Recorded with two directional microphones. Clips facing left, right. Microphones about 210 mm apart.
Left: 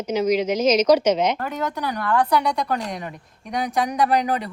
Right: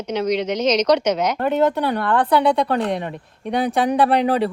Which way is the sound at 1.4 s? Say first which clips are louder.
Right 9 dB; 25° right (ahead or behind).